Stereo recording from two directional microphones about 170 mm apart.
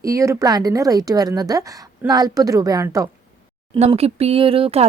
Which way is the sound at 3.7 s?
40° right (ahead or behind).